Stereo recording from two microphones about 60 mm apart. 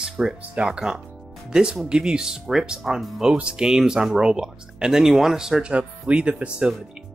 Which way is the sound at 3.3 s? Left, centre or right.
Centre.